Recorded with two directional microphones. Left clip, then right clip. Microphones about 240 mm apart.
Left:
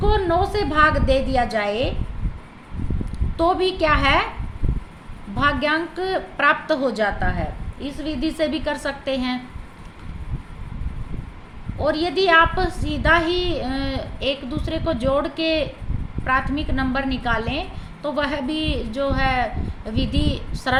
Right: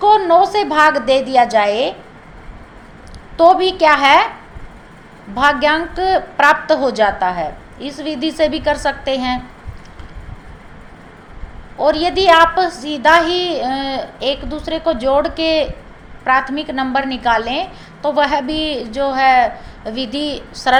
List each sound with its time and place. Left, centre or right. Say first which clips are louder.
0.0 s a sound: right 10 dB; left
0.4 s a woman's voice: right 6 dB; left
3.6 s a woman's voice: right 7 dB; left
5.4 s a woman's voice: right 7 dB; left
11.9 s a woman's voice: right 7 dB; left